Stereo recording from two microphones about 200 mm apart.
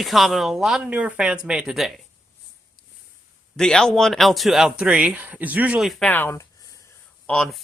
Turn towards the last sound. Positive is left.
turn(degrees=0)  # may be behind; listen again after turning